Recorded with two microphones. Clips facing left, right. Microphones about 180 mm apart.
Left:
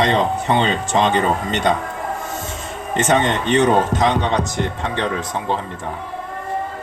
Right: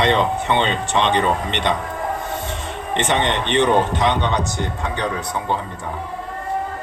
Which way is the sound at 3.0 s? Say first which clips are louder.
Left 3 dB; 45° left (ahead or behind).